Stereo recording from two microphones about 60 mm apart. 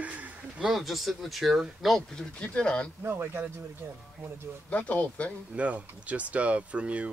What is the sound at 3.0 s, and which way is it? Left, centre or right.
Speech, right.